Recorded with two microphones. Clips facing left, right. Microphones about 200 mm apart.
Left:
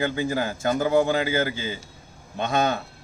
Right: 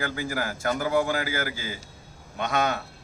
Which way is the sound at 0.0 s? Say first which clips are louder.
Left 5 dB; 25° left (ahead or behind).